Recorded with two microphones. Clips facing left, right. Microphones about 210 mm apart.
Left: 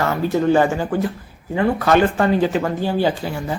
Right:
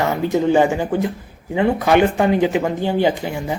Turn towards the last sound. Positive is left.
turn(degrees=-15)  # may be behind; listen again after turning